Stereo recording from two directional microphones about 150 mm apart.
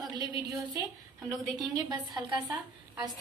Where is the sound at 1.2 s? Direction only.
Centre (ahead or behind).